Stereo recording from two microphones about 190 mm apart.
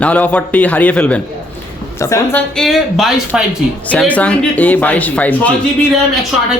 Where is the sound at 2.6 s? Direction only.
Centre (ahead or behind).